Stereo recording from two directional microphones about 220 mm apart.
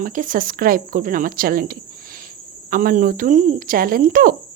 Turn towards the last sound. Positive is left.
turn(degrees=-40)  # may be behind; listen again after turning